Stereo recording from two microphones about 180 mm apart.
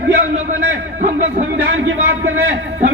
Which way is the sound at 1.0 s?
40° right (ahead or behind).